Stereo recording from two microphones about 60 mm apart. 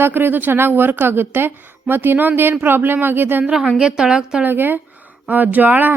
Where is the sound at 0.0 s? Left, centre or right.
Right.